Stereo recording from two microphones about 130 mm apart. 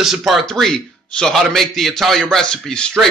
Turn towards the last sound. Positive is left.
turn(degrees=5)  # may be behind; listen again after turning